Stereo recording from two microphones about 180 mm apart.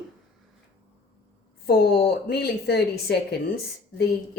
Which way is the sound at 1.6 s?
60° left (ahead or behind).